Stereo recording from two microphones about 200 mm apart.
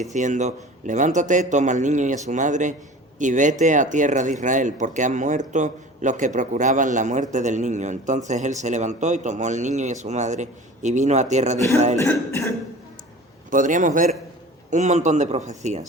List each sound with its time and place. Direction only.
0.0 s speech: 40° right (ahead or behind)
11.9 s cough: 15° left (ahead or behind)
13.5 s speech: 40° right (ahead or behind)